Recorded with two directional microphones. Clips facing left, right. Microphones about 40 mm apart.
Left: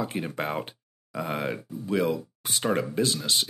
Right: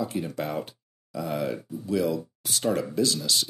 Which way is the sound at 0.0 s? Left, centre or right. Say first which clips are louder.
Even; left.